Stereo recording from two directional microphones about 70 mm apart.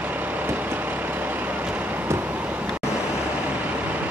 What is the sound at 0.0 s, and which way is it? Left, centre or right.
Vehicle, right.